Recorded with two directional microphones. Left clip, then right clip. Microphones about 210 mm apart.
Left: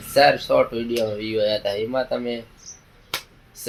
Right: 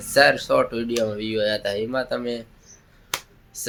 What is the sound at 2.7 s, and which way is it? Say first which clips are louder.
Finger snapping: left 8 dB; 50° left (ahead or behind).